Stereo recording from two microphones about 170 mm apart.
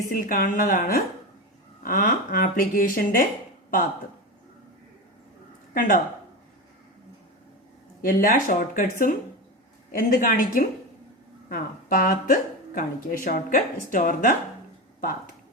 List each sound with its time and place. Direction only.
0.1 s a woman's voice: 55° left (ahead or behind)
5.7 s speech: 50° left (ahead or behind)
8.0 s a woman's voice: 55° left (ahead or behind)